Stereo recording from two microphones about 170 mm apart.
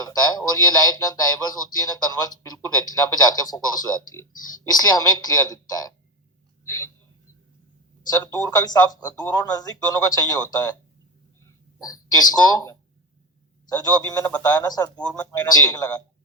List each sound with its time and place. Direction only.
0.0 s speech: 20° left (ahead or behind)
8.1 s speech: 20° left (ahead or behind)
13.7 s speech: 20° left (ahead or behind)
14.3 s speech: 10° left (ahead or behind)
14.5 s speech: 20° left (ahead or behind)
14.9 s speech: 5° left (ahead or behind)
15.2 s speech: 20° left (ahead or behind)